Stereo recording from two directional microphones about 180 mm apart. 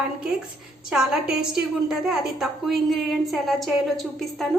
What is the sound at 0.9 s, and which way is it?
A woman's voice, 5° right (ahead or behind).